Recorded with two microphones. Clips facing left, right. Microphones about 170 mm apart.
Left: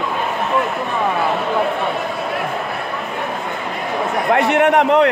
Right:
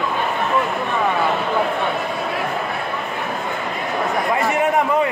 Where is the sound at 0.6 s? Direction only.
Centre (ahead or behind).